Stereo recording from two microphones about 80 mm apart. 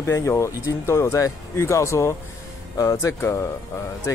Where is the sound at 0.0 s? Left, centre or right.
Left.